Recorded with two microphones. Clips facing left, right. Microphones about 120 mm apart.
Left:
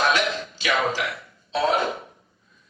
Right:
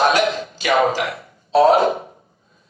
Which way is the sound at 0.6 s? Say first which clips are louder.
Right 7 dB; 50° right (ahead or behind).